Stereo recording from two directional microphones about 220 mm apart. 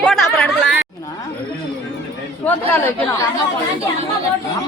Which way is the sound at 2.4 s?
10° left (ahead or behind).